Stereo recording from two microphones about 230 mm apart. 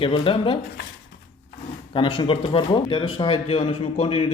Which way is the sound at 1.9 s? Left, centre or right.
Left.